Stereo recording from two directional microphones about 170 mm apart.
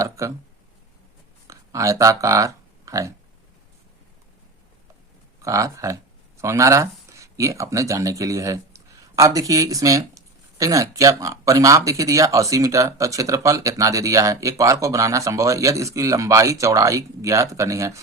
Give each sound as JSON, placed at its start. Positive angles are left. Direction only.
{"t": 0.0, "sound": "a sound", "side_deg": -20}
{"t": 1.5, "sound": "speech", "side_deg": -20}
{"t": 5.4, "sound": "speech", "side_deg": -20}